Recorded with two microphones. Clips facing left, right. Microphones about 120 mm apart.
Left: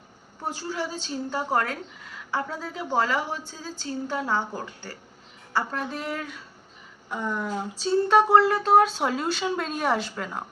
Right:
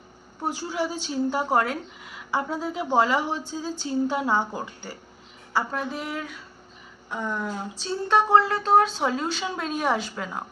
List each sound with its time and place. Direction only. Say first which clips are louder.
0.4 s a woman's voice: right 3 dB; 15° right (ahead or behind)
5.5 s speech: right 1 dB; 5° right (ahead or behind)